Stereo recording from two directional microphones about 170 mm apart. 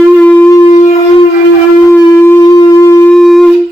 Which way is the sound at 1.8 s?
15° left (ahead or behind).